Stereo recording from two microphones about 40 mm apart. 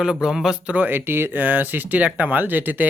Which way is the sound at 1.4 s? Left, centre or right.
Right.